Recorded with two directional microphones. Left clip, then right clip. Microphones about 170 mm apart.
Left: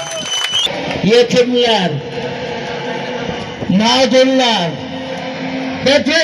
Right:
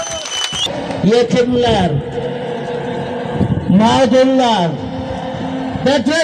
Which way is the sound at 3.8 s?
30° left (ahead or behind).